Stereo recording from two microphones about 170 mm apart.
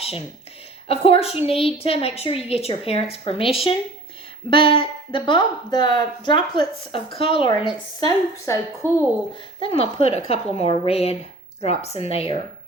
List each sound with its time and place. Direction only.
0.9 s a woman's voice: 35° left (ahead or behind)
7.9 s speech: 20° left (ahead or behind)
9.6 s a woman's voice: 35° left (ahead or behind)